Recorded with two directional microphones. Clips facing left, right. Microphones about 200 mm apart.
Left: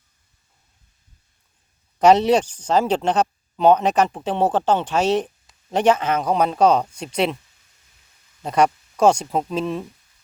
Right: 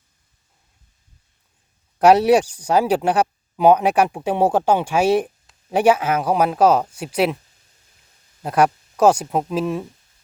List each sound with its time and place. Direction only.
2.0 s speech: 5° right (ahead or behind)
8.4 s speech: 5° right (ahead or behind)